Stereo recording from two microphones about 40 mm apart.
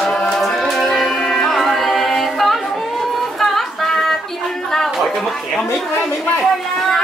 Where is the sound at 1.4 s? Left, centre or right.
Centre.